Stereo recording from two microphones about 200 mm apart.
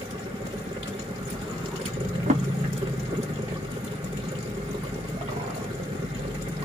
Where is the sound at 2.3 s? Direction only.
35° right (ahead or behind).